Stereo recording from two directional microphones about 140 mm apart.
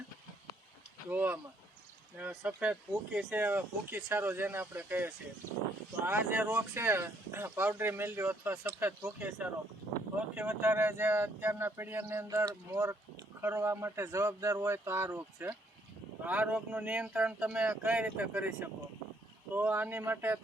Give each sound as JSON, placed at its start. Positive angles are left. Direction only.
{"t": 1.1, "sound": "speech", "side_deg": -15}